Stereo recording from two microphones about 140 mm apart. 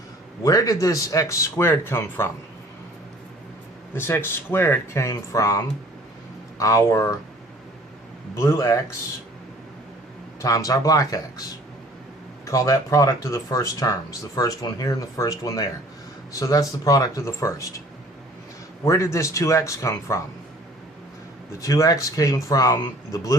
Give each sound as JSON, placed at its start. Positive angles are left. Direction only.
{"t": 0.4, "sound": "speech", "side_deg": 25}
{"t": 3.9, "sound": "speech", "side_deg": 15}
{"t": 8.4, "sound": "speech", "side_deg": 20}
{"t": 10.4, "sound": "speech", "side_deg": 25}
{"t": 12.5, "sound": "speech", "side_deg": 25}
{"t": 18.9, "sound": "speech", "side_deg": 20}
{"t": 21.6, "sound": "speech", "side_deg": 25}